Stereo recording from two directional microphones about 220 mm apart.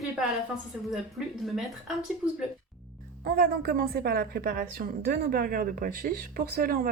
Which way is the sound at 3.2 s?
45° right (ahead or behind).